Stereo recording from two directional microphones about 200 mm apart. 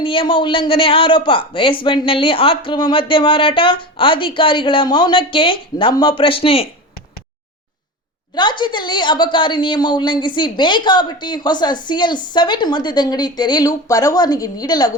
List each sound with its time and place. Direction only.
0.0 s a man's voice: 25° left (ahead or behind)
8.4 s a man's voice: 20° left (ahead or behind)